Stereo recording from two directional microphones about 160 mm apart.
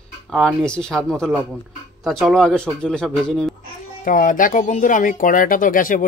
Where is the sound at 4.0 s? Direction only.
55° left (ahead or behind).